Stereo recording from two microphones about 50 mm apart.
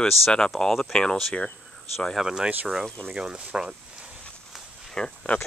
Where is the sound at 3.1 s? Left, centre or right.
Centre.